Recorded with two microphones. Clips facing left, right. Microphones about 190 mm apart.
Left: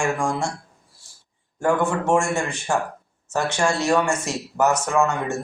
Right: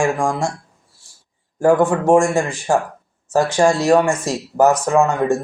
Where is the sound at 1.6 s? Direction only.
35° right (ahead or behind).